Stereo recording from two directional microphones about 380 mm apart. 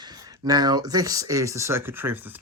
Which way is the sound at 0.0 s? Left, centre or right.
Centre.